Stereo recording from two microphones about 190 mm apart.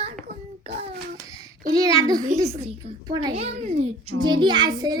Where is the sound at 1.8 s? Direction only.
20° right (ahead or behind).